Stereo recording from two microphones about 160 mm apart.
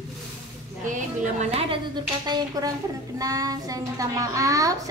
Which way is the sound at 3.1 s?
20° right (ahead or behind).